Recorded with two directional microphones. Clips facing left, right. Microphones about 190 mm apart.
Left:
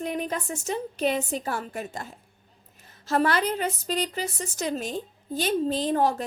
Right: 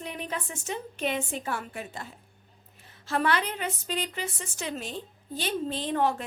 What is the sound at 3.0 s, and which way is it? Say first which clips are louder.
A woman's voice: left 4 dB; 40° left (ahead or behind).